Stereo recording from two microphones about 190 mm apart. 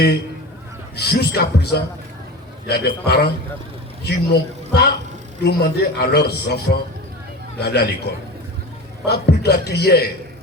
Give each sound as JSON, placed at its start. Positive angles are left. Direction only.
{"t": 0.9, "sound": "a man's voice", "side_deg": 60}
{"t": 7.6, "sound": "a man's voice", "side_deg": 60}
{"t": 9.0, "sound": "a man's voice", "side_deg": 60}